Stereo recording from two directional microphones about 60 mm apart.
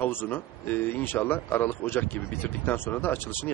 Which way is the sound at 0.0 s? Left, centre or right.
Left.